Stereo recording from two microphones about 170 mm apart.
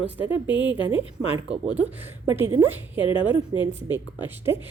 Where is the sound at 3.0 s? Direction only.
30° left (ahead or behind).